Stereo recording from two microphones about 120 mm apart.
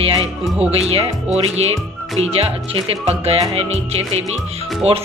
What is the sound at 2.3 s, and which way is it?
Speech, 60° right (ahead or behind).